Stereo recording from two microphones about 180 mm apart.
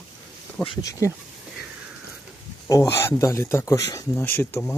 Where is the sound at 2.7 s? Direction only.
15° left (ahead or behind).